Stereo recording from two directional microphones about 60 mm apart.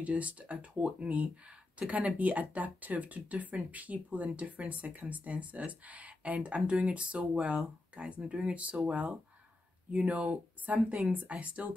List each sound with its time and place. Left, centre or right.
0.0 s speech: right